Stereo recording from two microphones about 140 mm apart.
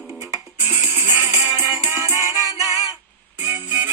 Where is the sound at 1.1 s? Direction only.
15° right (ahead or behind).